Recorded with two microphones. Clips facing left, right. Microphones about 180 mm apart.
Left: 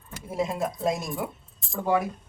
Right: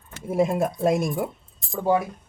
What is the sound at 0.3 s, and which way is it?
Speech, 55° right (ahead or behind).